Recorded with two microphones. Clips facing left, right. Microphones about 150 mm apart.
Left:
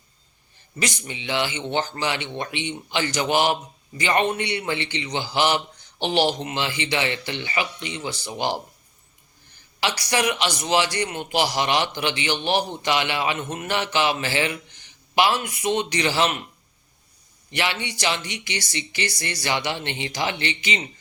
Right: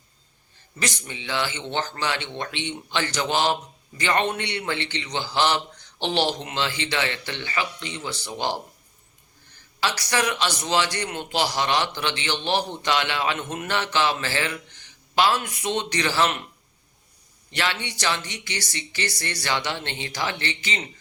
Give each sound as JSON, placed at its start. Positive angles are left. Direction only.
{"t": 0.8, "sound": "speech", "side_deg": 15}
{"t": 9.8, "sound": "speech", "side_deg": 15}
{"t": 17.5, "sound": "speech", "side_deg": 15}